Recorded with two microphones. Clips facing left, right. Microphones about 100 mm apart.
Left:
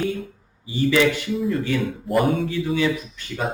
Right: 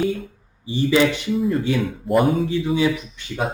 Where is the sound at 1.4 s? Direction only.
Centre (ahead or behind).